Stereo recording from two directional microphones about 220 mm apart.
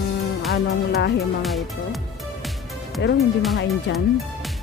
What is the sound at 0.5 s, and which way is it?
Speech, 45° left (ahead or behind).